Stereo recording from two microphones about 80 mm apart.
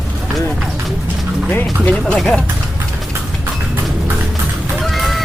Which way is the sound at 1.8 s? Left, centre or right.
Centre.